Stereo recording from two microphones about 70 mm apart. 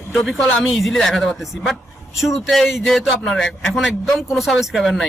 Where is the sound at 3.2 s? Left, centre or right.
Centre.